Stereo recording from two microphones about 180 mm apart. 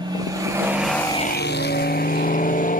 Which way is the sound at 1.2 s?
65° left (ahead or behind).